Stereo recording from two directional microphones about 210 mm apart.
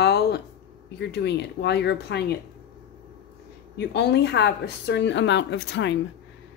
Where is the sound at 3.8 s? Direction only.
55° left (ahead or behind).